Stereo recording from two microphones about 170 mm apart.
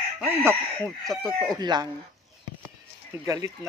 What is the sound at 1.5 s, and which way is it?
Speech, 25° right (ahead or behind).